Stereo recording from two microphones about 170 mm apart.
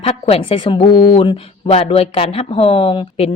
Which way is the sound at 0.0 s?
35° left (ahead or behind).